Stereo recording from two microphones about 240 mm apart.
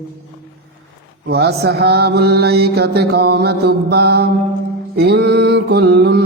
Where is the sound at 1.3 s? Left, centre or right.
Right.